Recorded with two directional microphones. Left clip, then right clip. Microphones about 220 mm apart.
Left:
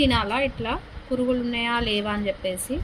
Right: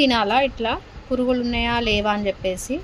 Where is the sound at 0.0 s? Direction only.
30° right (ahead or behind).